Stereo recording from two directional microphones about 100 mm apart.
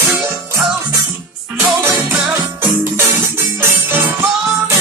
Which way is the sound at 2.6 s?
25° right (ahead or behind).